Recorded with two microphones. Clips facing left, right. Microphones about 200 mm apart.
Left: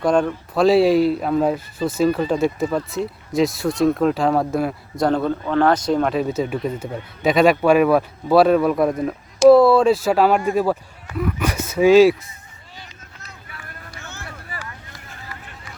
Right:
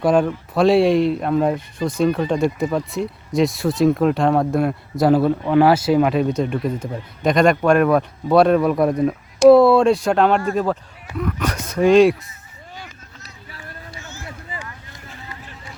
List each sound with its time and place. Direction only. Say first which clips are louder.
0.0 s a man's voice: right 1 dB; 5° right (ahead or behind)
13.5 s run: right 3 dB; 30° right (ahead or behind)
14.0 s a sound: even; 60° left (ahead or behind)
14.5 s vehicle: right 1 dB; 20° right (ahead or behind)